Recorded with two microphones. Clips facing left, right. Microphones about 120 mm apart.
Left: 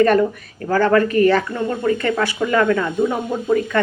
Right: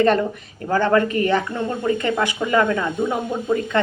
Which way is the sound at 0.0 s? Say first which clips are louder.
Left 3 dB; 25° right (ahead or behind).